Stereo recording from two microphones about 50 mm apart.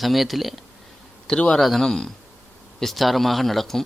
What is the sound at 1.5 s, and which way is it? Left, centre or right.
Speech, centre.